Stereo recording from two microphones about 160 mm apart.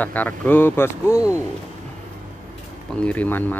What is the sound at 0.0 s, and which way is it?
Speech, 10° left (ahead or behind).